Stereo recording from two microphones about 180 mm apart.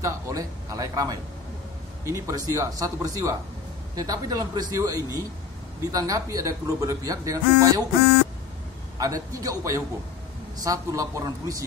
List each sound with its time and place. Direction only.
0.0 s speech: 20° right (ahead or behind)
8.9 s speech: 20° right (ahead or behind)